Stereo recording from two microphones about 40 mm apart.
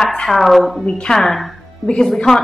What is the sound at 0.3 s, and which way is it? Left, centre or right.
Speech, centre.